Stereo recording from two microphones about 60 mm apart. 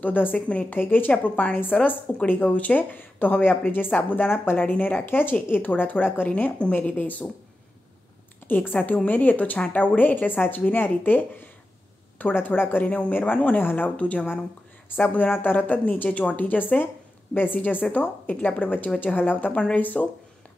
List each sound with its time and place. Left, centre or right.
0.0 s a woman's voice: left
6.2 s a woman's voice: left
8.5 s a woman's voice: left